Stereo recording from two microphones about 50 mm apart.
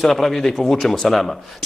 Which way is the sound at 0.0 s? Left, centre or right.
Centre.